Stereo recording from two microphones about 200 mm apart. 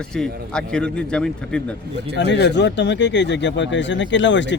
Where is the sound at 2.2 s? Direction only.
60° left (ahead or behind).